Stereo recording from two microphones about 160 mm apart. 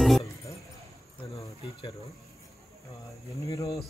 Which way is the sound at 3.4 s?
20° left (ahead or behind).